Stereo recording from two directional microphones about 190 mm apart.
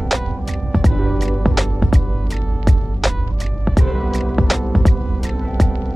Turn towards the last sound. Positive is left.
turn(degrees=0)  # may be behind; listen again after turning